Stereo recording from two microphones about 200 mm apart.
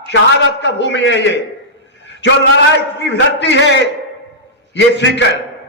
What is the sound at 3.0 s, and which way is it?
Speech, 65° left (ahead or behind).